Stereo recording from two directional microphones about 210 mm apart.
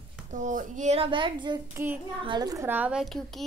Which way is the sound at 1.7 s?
10° right (ahead or behind).